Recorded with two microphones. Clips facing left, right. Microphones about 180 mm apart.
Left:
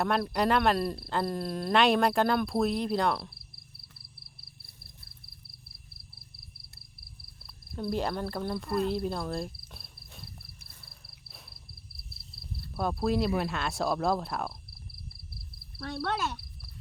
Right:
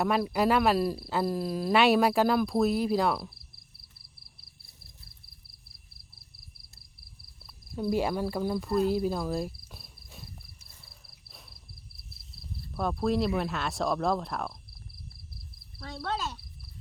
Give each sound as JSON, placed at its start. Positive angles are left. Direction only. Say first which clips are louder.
{"t": 0.0, "sound": "speech", "louder": "right 2 dB", "side_deg": -5}
{"t": 7.4, "sound": "speech", "louder": "right 3 dB", "side_deg": -10}
{"t": 8.9, "sound": "cricket", "louder": "right 3 dB", "side_deg": -5}
{"t": 11.0, "sound": "a sound", "louder": "left 1 dB", "side_deg": 5}
{"t": 12.7, "sound": "speech", "louder": "right 1 dB", "side_deg": 10}
{"t": 15.8, "sound": "speech", "louder": "left 2 dB", "side_deg": 70}